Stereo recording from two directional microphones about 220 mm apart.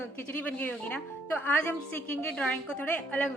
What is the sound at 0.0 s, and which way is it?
Speech, 10° left (ahead or behind).